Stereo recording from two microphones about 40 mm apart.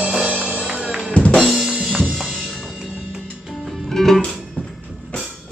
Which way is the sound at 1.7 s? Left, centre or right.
Centre.